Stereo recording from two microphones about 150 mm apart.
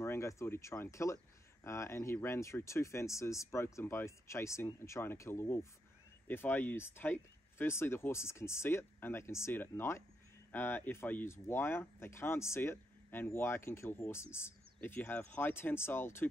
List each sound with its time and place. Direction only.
0.0 s speech: 20° left (ahead or behind)